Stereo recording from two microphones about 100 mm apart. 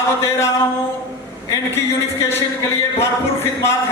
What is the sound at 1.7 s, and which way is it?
A man's voice, 25° left (ahead or behind).